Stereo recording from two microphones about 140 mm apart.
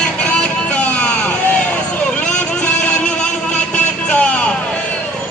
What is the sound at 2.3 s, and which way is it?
Music, 10° left (ahead or behind).